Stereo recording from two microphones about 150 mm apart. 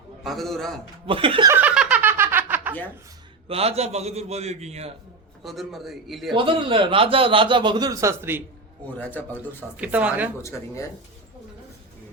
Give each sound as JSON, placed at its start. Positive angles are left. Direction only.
{"t": 0.3, "sound": "a man's voice", "side_deg": 0}
{"t": 1.0, "sound": "speech", "side_deg": -35}
{"t": 1.5, "sound": "snicker", "side_deg": -10}
{"t": 3.5, "sound": "a man's voice", "side_deg": -40}
{"t": 5.4, "sound": "a man's voice", "side_deg": 0}
{"t": 6.3, "sound": "speech", "side_deg": -35}
{"t": 9.0, "sound": "a man's voice", "side_deg": 10}
{"t": 9.7, "sound": "speech", "side_deg": -10}